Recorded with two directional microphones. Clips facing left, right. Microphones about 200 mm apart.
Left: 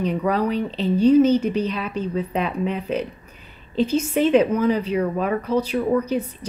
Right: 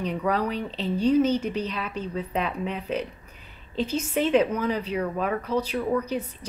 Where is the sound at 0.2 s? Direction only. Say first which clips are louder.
Left 2 dB; 15° left (ahead or behind).